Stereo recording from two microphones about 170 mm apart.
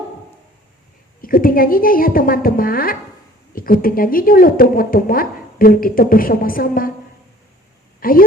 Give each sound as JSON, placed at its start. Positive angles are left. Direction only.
{"t": 1.2, "sound": "a woman's voice", "side_deg": 55}
{"t": 8.0, "sound": "a woman's voice", "side_deg": 60}